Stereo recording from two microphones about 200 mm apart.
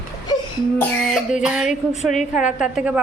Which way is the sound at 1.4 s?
Centre (ahead or behind).